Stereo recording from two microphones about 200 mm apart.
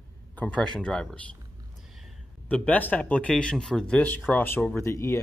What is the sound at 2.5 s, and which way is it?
Speech, 5° left (ahead or behind).